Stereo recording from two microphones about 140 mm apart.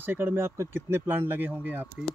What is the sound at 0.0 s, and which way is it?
Speech, 15° right (ahead or behind).